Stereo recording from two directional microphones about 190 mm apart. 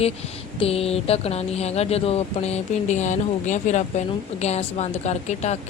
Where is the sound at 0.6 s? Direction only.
30° left (ahead or behind).